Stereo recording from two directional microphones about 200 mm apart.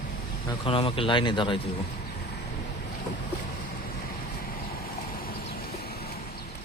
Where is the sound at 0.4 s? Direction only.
25° left (ahead or behind).